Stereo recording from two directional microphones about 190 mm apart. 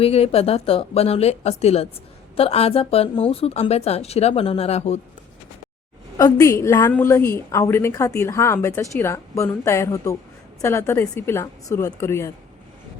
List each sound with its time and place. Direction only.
0.0 s speech: 30° left (ahead or behind)
6.1 s a woman's voice: 15° left (ahead or behind)